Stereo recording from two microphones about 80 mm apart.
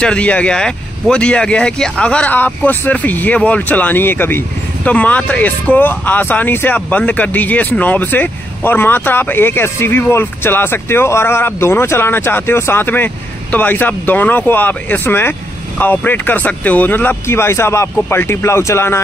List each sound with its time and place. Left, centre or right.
0.0 s speech: centre; by 18.9 s left